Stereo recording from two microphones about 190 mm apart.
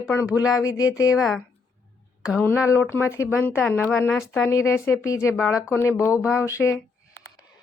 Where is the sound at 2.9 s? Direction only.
15° left (ahead or behind).